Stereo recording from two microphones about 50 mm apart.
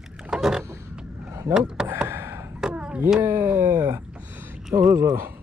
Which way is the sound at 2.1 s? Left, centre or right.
Right.